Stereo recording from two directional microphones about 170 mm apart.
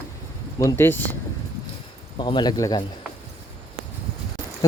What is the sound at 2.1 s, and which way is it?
Speech, 30° left (ahead or behind).